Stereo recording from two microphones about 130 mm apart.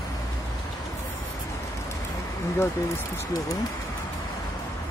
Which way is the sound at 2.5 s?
20° left (ahead or behind).